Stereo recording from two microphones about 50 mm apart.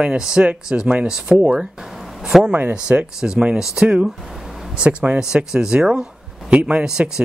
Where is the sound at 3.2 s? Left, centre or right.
Centre.